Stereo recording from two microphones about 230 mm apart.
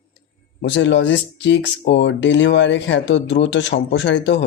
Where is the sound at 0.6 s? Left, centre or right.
Left.